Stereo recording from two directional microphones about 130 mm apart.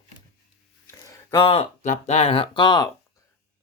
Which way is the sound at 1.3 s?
45° left (ahead or behind).